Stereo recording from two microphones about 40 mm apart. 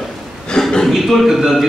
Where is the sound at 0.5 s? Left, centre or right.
Centre.